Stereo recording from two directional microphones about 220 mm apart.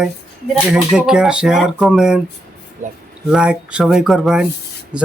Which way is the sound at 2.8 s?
35° right (ahead or behind).